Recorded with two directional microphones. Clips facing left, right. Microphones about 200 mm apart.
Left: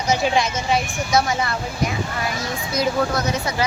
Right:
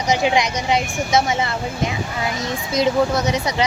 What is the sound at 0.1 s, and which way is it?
A child's voice, 15° right (ahead or behind).